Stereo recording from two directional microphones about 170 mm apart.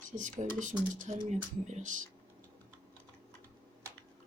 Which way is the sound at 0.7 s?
5° right (ahead or behind).